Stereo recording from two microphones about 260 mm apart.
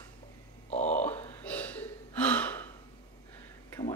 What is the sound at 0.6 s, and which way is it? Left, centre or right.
Grunt, left.